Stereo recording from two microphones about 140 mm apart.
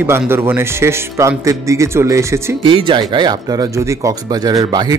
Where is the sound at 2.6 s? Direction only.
35° right (ahead or behind).